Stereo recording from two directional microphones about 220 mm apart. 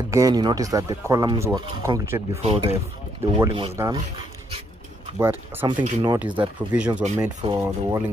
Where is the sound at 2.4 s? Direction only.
25° right (ahead or behind).